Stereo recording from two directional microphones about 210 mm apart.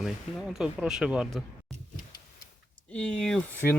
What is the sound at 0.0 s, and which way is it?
Speech, centre (ahead or behind).